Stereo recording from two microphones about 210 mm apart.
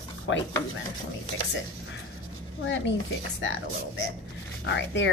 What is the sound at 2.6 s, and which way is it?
Speech, 60° left (ahead or behind).